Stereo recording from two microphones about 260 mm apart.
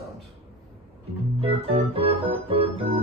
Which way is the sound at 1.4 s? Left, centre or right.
Right.